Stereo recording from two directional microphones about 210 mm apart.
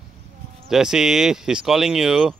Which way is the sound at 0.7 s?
Centre (ahead or behind).